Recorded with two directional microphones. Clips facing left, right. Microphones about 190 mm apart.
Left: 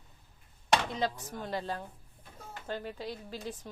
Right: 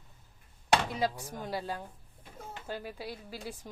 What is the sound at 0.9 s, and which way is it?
A woman's voice, 10° right (ahead or behind).